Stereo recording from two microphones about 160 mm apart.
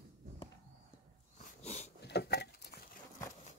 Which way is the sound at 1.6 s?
45° left (ahead or behind).